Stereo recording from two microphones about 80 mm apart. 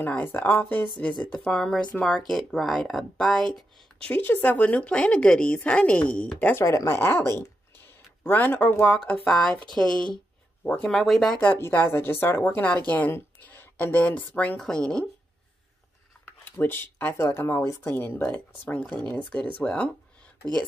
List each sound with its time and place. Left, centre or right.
0.2 s a woman's voice: left
1.3 s speech: centre
4.1 s a woman's voice: left
6.5 s speech: left
7.0 s speech: left
9.1 s a woman's voice: centre
11.4 s a woman's voice: left; by 15.0 s centre
16.4 s a woman's voice: left